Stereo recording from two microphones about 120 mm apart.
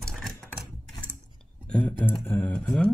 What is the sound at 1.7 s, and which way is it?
Speech, 10° left (ahead or behind).